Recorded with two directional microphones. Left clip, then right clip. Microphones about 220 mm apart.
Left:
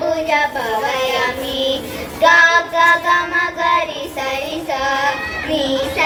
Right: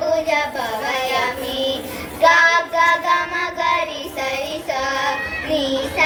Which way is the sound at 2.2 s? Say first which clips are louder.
Left 2 dB; 55° right (ahead or behind).